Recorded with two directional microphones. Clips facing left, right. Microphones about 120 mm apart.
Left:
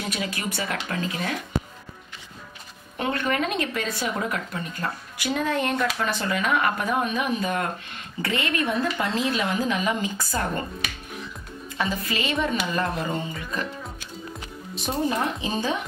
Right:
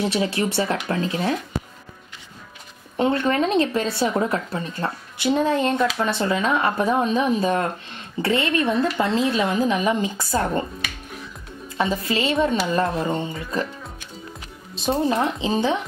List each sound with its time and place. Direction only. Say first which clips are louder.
0.0 s speech: right 8 dB; 30° right (ahead or behind)
3.0 s speech: right 5 dB; 25° right (ahead or behind)
11.8 s speech: right 5 dB; 25° right (ahead or behind)
14.9 s speech: right 4 dB; 20° right (ahead or behind)